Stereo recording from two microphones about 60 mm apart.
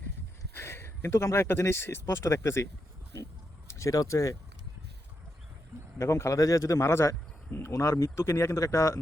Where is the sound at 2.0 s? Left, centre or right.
Left.